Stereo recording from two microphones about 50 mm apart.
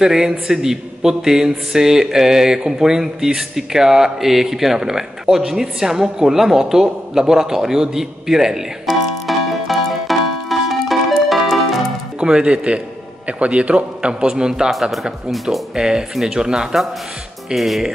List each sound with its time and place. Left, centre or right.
0.0 s a man's voice: centre
8.8 s music: centre
12.2 s a man's voice: centre
14.2 s a man's voice: centre
14.7 s a man's voice: centre
17.6 s speech: centre